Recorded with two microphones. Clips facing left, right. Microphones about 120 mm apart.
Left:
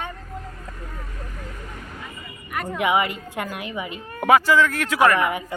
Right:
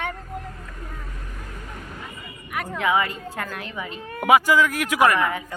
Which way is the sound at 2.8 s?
20° left (ahead or behind).